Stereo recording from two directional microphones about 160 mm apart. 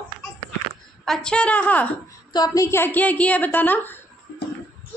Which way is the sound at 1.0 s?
5° left (ahead or behind).